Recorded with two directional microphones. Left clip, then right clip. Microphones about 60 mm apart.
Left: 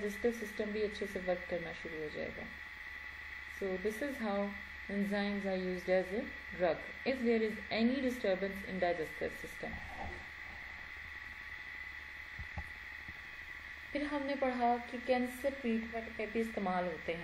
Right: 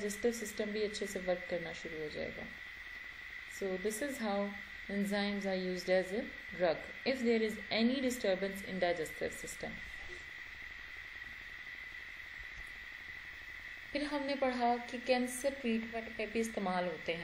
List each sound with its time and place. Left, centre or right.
0.0 s a woman's voice: centre
1.1 s a woman's voice: centre
3.8 s a woman's voice: centre
8.5 s a woman's voice: right
8.8 s a woman's voice: centre
13.9 s a woman's voice: centre